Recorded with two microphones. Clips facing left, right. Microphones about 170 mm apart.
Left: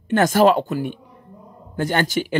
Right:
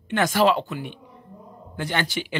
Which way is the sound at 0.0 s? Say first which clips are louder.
Left 5 dB; 45° left (ahead or behind).